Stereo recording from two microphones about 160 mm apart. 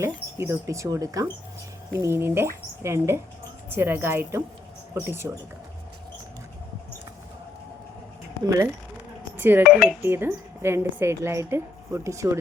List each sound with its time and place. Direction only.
0.0 s a woman's voice: 15° right (ahead or behind)
9.4 s a woman's voice: 15° right (ahead or behind)